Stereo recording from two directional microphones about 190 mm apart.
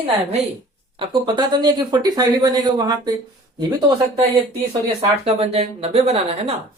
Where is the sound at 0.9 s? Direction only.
25° right (ahead or behind).